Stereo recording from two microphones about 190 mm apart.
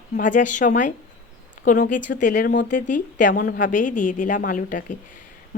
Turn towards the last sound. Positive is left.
turn(degrees=45)  # may be behind; listen again after turning